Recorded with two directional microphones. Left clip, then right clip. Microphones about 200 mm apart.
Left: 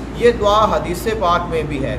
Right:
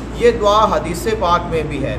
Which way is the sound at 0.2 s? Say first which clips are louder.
Right 1 dB; 5° right (ahead or behind).